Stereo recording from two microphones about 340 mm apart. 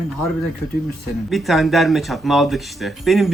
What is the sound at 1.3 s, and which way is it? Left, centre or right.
Speech, centre.